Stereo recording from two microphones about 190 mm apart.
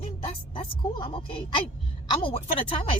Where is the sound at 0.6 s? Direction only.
25° left (ahead or behind).